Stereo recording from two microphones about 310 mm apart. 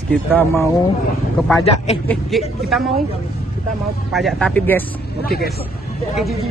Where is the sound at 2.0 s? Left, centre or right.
Centre.